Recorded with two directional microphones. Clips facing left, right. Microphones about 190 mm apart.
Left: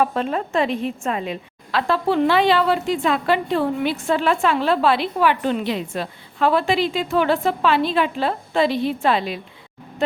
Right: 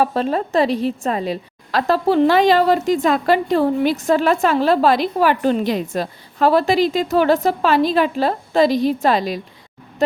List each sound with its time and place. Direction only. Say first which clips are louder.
0.0 s a woman's voice: right 3 dB; 35° right (ahead or behind)